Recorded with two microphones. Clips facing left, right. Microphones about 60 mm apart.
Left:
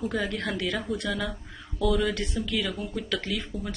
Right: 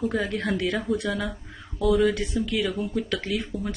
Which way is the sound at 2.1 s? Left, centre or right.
Centre.